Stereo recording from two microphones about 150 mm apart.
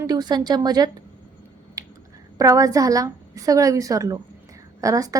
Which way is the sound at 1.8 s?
25° right (ahead or behind).